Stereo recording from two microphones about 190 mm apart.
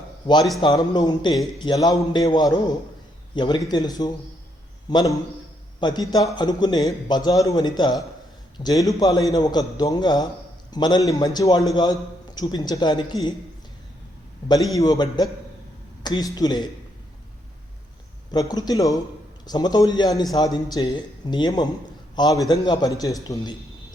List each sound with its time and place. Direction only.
0.6 s a man's voice: 20° left (ahead or behind)
14.4 s a man's voice: 20° left (ahead or behind)
18.3 s a man's voice: 20° left (ahead or behind)